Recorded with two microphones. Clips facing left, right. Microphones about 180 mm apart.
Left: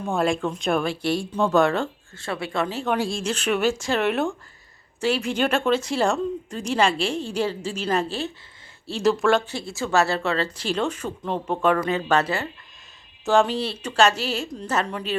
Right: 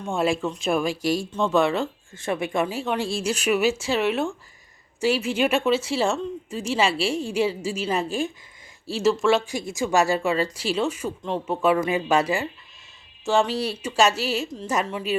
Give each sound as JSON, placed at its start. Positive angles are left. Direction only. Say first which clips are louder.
{"t": 0.0, "sound": "speech", "louder": "left 1 dB", "side_deg": 0}
{"t": 2.1, "sound": "speech", "louder": "right 2 dB", "side_deg": -20}
{"t": 2.8, "sound": "speech", "louder": "left 1 dB", "side_deg": 0}
{"t": 9.5, "sound": "speech", "louder": "right 1 dB", "side_deg": -15}
{"t": 13.2, "sound": "speech", "louder": "left 2 dB", "side_deg": 0}